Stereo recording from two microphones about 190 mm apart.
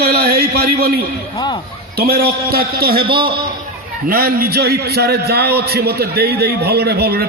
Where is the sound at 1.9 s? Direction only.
55° right (ahead or behind).